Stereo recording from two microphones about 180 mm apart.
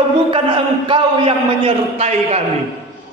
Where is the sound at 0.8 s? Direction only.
30° right (ahead or behind).